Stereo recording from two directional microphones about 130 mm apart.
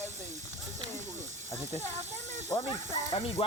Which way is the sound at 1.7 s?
60° right (ahead or behind).